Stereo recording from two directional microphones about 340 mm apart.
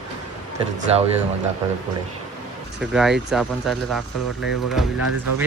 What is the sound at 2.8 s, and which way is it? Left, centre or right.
Speech, centre.